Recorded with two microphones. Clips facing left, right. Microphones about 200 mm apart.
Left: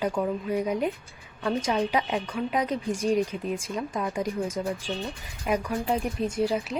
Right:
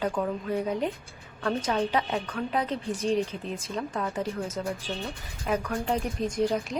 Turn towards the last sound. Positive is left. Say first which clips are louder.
# even
turn(degrees=5)  # may be behind; listen again after turning